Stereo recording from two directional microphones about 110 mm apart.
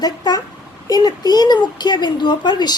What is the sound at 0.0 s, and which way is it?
A child's voice, 40° left (ahead or behind).